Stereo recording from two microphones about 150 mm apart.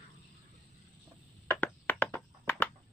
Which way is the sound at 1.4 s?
15° left (ahead or behind).